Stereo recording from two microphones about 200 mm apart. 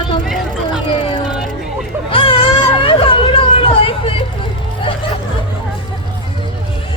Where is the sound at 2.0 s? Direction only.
25° left (ahead or behind).